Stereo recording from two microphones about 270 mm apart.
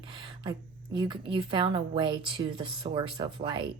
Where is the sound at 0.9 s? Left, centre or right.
Centre.